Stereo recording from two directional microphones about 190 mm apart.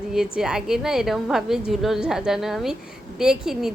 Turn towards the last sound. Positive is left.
turn(degrees=-5)  # may be behind; listen again after turning